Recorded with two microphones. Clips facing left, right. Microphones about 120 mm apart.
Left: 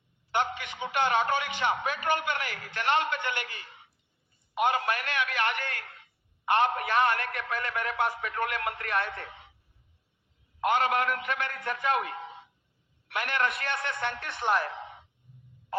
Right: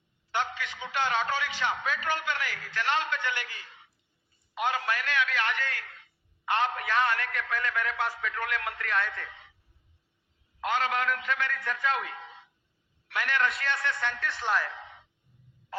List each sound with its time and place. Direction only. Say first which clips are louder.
0.3 s a man's voice: left 2 dB; 55° left (ahead or behind)
10.6 s a man's voice: left 3 dB; 55° left (ahead or behind)
12.1 s a sound: left 4 dB; 15° left (ahead or behind)
13.1 s a man's voice: even; 55° left (ahead or behind)